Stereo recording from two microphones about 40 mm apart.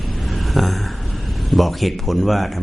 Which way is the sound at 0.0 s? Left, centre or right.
Centre.